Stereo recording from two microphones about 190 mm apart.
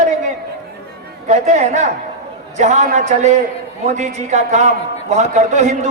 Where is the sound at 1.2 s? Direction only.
40° right (ahead or behind).